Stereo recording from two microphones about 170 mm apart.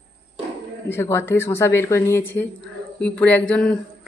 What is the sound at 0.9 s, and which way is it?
A woman's voice, 15° left (ahead or behind).